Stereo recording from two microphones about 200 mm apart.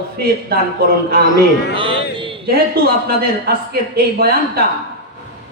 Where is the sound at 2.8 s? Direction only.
50° right (ahead or behind).